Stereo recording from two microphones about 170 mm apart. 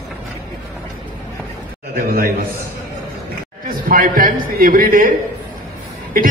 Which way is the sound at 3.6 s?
55° right (ahead or behind).